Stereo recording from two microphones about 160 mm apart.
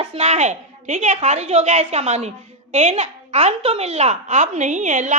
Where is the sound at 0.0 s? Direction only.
40° right (ahead or behind).